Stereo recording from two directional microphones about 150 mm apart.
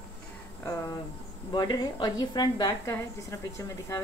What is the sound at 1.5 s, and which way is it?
A woman's voice, 30° left (ahead or behind).